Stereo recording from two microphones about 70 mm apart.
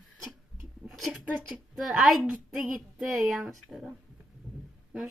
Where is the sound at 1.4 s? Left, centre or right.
Centre.